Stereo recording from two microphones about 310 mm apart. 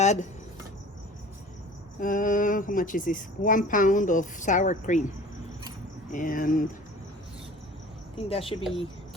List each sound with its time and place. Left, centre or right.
0.0 s speech: left
2.0 s speech: left
6.1 s speech: left
8.1 s speech: centre